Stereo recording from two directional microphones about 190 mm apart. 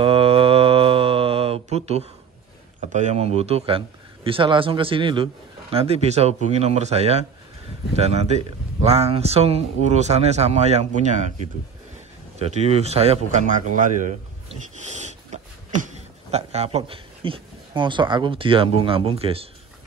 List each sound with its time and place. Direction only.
0.0 s mantra: 30° right (ahead or behind)
2.9 s a man's voice: 40° right (ahead or behind)
12.4 s speech: 35° right (ahead or behind)